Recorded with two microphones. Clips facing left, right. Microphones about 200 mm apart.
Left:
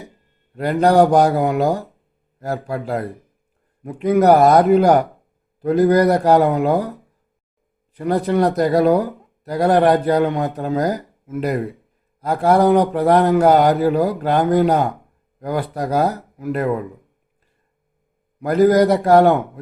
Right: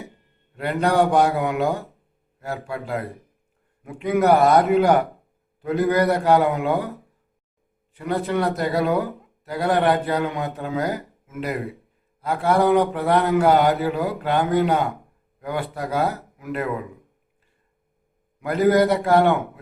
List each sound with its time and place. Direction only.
0.5 s speech: 35° left (ahead or behind)
7.9 s speech: 35° left (ahead or behind)
18.3 s speech: 40° left (ahead or behind)